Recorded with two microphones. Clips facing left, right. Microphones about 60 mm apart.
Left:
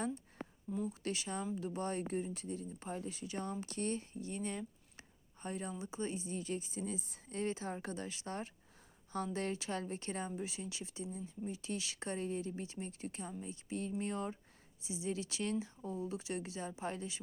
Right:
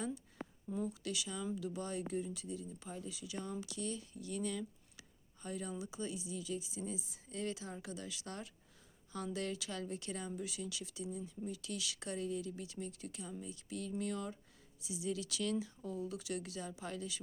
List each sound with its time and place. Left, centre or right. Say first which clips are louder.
1.0 s speech: left 2 dB; left